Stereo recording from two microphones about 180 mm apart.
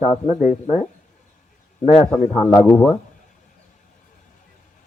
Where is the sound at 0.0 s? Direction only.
35° left (ahead or behind).